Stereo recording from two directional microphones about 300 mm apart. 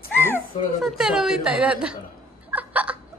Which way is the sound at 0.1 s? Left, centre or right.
Centre.